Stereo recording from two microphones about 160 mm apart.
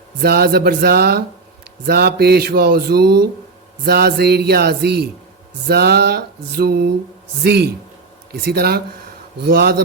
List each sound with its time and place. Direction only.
0.2 s speech: 80° right
3.8 s music: 90° right
5.6 s speech: 85° right
7.4 s music: 90° right
8.3 s speech: 85° right